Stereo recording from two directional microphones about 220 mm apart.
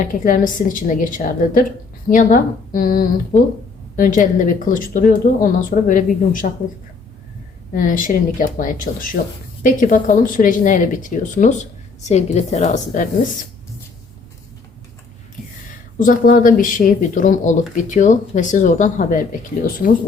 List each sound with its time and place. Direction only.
0.0 s speech: 40° left (ahead or behind)
7.7 s speech: 40° left (ahead or behind)
16.0 s speech: 40° left (ahead or behind)